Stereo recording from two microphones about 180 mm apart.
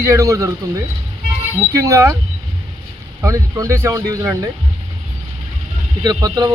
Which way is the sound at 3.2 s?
15° right (ahead or behind).